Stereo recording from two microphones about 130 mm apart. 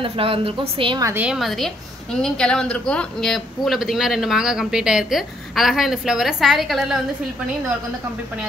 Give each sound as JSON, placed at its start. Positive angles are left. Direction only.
{"t": 0.0, "sound": "a woman's voice", "side_deg": -45}
{"t": 1.1, "sound": "a man's voice", "side_deg": -5}